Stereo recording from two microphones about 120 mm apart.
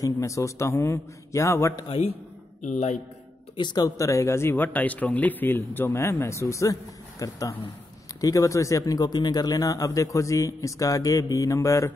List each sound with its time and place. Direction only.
0.0 s speech: 25° left (ahead or behind)
1.9 s a man's voice: 55° left (ahead or behind)
2.6 s speech: 80° left
3.5 s speech: 35° left (ahead or behind)